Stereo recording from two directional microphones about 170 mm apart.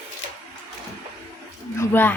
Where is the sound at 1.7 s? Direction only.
10° left (ahead or behind).